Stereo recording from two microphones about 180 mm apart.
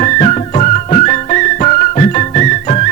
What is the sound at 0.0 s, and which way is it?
Music, 40° left (ahead or behind).